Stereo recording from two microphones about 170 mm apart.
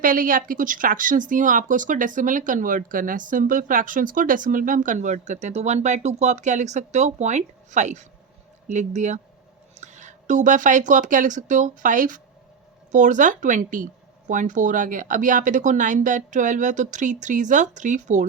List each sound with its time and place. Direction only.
0.0 s speech: 55° right (ahead or behind)